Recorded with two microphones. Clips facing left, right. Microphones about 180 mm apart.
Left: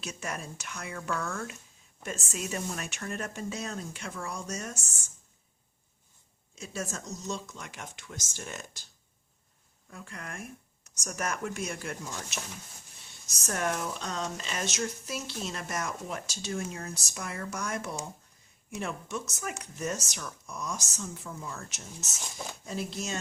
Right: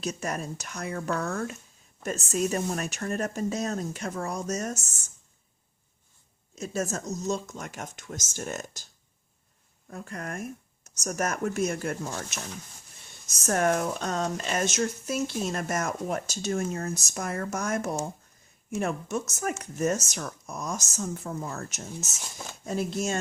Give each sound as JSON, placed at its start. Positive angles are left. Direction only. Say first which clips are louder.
{"t": 0.0, "sound": "a woman's voice", "louder": "right 6 dB", "side_deg": -40}
{"t": 6.6, "sound": "speech", "louder": "right 7 dB", "side_deg": -40}
{"t": 9.9, "sound": "speech", "louder": "right 7 dB", "side_deg": -40}
{"t": 13.2, "sound": "speech", "louder": "right 7 dB", "side_deg": -50}